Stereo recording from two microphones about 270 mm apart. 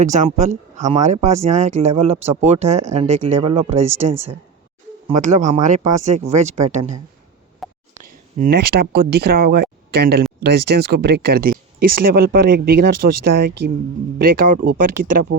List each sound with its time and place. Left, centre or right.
0.0 s speech: right
7.6 s a sound: centre
8.4 s speech: right
14.2 s speech: right